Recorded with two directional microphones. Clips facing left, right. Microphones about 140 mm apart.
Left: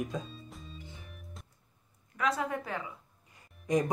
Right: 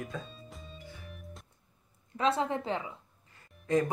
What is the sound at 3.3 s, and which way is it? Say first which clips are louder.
Music: right 1 dB; 15° left (ahead or behind).